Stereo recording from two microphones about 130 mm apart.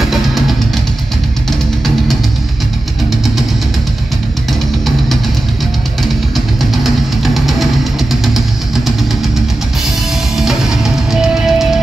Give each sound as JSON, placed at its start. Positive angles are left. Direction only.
{"t": 0.0, "sound": "music", "side_deg": 0}
{"t": 6.3, "sound": "music", "side_deg": 0}
{"t": 10.3, "sound": "music", "side_deg": -5}